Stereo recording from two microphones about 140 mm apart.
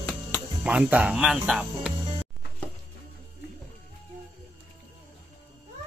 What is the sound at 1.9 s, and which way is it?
Music, 30° right (ahead or behind).